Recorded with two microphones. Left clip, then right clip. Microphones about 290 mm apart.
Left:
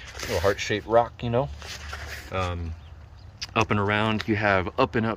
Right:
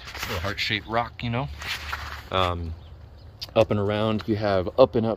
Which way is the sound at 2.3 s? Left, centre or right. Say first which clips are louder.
Right 6 dB; centre.